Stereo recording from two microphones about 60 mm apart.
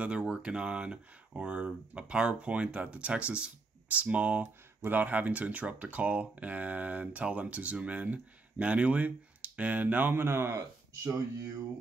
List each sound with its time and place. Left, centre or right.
0.0 s speech: centre
10.1 s speech: right